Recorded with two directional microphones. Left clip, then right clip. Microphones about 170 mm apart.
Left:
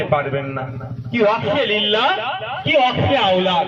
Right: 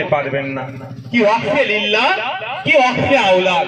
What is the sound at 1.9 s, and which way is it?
A man's voice, 65° right (ahead or behind).